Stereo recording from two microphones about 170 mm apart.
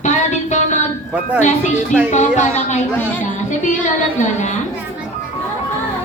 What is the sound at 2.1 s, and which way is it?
Speech, 45° left (ahead or behind).